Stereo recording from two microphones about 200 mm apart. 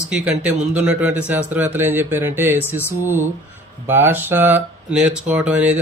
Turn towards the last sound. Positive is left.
turn(degrees=-5)  # may be behind; listen again after turning